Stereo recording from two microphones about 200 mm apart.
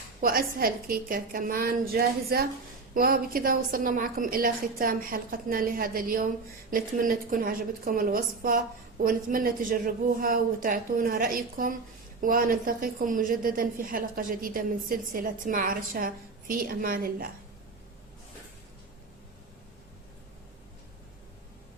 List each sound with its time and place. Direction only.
0.2 s a woman's voice: 45° right (ahead or behind)